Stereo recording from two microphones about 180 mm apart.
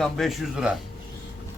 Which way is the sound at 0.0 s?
Centre (ahead or behind).